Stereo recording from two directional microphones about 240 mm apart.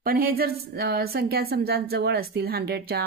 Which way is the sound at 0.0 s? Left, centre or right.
Right.